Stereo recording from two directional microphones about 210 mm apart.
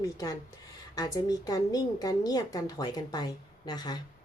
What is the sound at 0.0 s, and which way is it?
A woman's voice, 15° left (ahead or behind).